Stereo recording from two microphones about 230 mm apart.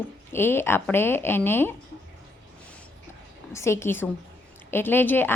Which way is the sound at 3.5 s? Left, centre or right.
Centre.